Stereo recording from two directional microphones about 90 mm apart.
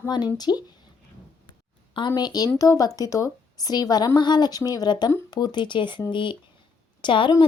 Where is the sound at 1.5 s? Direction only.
60° left (ahead or behind).